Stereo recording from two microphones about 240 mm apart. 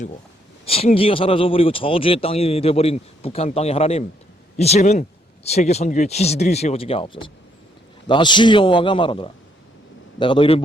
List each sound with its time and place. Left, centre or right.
0.6 s speech: left